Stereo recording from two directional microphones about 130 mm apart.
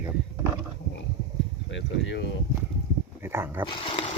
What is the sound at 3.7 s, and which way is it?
Speech, 40° left (ahead or behind).